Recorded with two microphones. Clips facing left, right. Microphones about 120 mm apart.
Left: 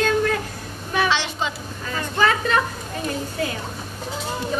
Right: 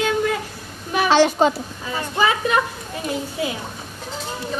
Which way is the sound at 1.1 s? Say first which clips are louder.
Right 9 dB; 45° right (ahead or behind).